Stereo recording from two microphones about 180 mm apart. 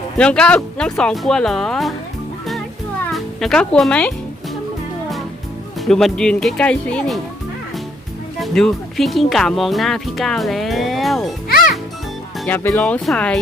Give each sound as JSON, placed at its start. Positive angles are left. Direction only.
{"t": 0.2, "sound": "speech", "side_deg": 5}
{"t": 3.1, "sound": "speech", "side_deg": 5}
{"t": 5.8, "sound": "speech", "side_deg": 0}
{"t": 8.4, "sound": "speech", "side_deg": 0}
{"t": 11.4, "sound": "music", "side_deg": 55}
{"t": 12.5, "sound": "speech", "side_deg": 10}